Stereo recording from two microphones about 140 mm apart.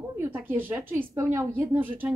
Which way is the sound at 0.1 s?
15° right (ahead or behind).